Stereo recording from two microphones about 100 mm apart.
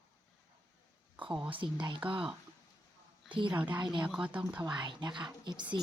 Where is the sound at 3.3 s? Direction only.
55° right (ahead or behind).